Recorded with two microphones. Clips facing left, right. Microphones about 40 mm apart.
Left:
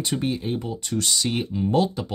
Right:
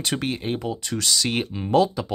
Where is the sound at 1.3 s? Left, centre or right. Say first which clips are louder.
Even; right.